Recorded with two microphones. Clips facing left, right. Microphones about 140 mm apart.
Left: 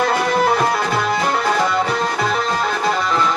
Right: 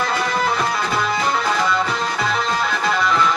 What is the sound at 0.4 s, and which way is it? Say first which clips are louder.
Music: left 4 dB; 55° left (ahead or behind).